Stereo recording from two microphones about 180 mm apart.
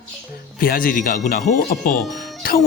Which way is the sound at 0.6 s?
50° left (ahead or behind).